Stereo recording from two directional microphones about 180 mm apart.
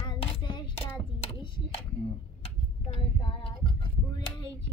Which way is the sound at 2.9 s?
30° left (ahead or behind).